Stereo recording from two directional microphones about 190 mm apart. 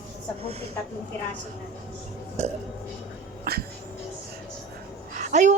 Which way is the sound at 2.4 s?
35° right (ahead or behind).